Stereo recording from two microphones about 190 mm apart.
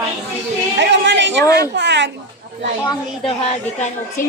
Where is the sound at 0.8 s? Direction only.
65° right (ahead or behind).